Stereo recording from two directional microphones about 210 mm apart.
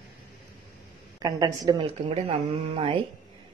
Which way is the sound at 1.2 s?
20° right (ahead or behind).